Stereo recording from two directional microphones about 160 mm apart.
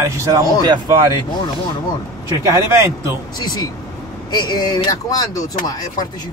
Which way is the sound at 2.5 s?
20° right (ahead or behind).